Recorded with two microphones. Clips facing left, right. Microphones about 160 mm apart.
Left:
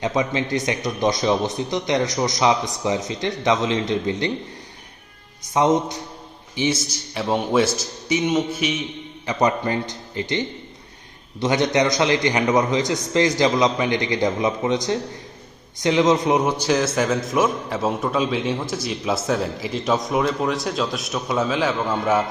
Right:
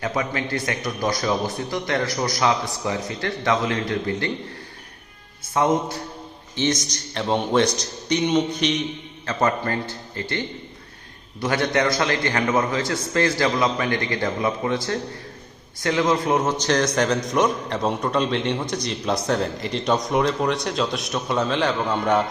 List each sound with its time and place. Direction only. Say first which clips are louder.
0.0 s a man's voice: left 3 dB; 20° left (ahead or behind)
5.5 s a man's voice: left 2 dB; 20° left (ahead or behind)
6.6 s a man's voice: left 1 dB; 10° left (ahead or behind)
9.2 s a man's voice: left 2 dB; 15° left (ahead or behind)